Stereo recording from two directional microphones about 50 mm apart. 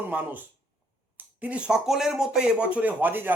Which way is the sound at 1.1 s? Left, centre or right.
Right.